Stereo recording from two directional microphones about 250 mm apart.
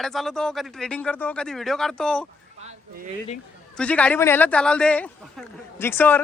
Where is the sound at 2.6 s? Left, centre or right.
Right.